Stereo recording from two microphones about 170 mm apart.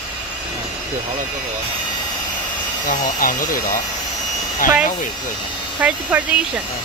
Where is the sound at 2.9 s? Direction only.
50° left (ahead or behind).